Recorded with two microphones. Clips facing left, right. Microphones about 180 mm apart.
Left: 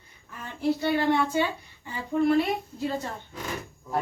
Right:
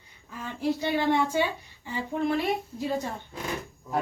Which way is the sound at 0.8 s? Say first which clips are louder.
Even; 15° right (ahead or behind).